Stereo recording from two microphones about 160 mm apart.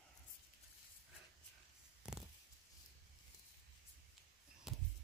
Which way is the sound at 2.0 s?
5° right (ahead or behind).